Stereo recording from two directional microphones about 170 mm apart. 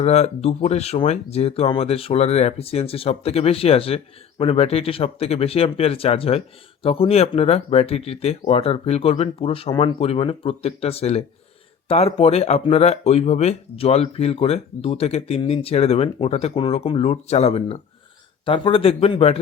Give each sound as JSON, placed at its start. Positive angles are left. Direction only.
{"t": 0.0, "sound": "speech", "side_deg": 40}